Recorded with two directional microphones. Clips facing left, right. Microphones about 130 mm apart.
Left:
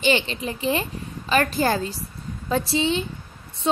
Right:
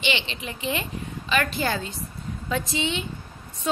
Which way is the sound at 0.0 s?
40° left (ahead or behind).